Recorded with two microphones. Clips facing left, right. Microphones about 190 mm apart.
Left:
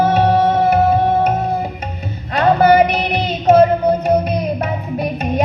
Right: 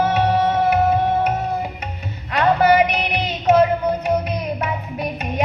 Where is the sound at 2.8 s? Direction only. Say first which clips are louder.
Left 4 dB; 30° left (ahead or behind).